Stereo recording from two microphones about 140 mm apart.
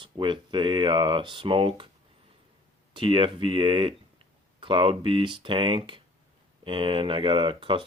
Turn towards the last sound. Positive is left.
turn(degrees=-35)  # may be behind; listen again after turning